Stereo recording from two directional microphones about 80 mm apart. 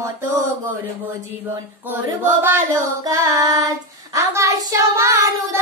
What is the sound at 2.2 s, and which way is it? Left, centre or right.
Child singing, right.